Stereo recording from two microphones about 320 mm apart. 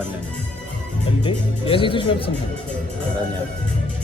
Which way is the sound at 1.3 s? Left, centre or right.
Centre.